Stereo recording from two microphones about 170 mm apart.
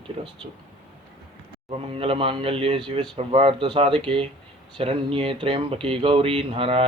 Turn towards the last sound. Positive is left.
turn(degrees=-35)  # may be behind; listen again after turning